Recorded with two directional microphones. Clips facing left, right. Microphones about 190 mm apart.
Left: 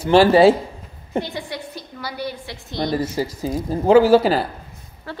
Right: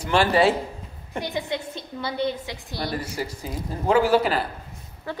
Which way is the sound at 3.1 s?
30° left (ahead or behind).